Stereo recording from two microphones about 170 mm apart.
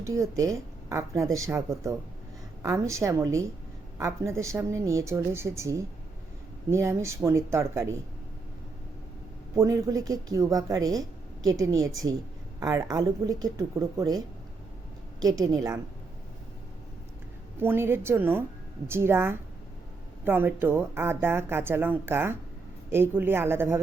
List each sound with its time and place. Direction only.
0.0 s a woman's voice: 20° right (ahead or behind)
9.6 s speech: 20° right (ahead or behind)
17.6 s a woman's voice: 15° right (ahead or behind)